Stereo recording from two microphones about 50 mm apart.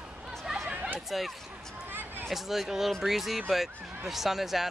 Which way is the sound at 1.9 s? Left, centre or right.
Right.